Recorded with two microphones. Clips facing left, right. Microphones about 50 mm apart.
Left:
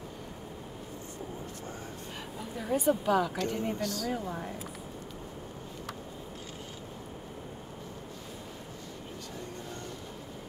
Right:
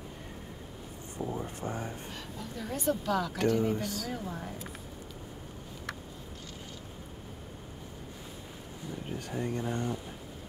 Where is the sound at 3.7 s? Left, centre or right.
Centre.